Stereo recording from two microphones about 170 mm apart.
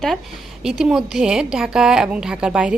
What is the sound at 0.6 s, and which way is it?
A woman's voice, 5° right (ahead or behind).